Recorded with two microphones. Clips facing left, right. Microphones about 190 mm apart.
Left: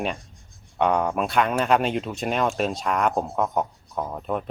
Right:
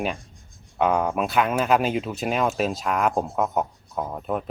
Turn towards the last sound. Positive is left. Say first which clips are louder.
# even
turn(degrees=-5)  # may be behind; listen again after turning